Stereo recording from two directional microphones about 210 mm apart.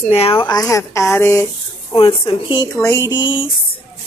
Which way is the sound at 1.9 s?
25° left (ahead or behind).